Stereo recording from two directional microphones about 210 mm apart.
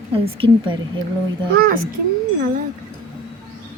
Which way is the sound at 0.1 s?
25° right (ahead or behind).